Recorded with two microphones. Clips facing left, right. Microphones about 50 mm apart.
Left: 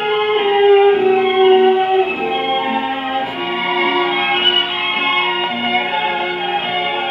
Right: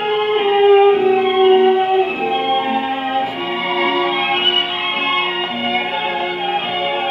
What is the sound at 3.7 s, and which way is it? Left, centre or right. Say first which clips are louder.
Music: left 1 dB; left.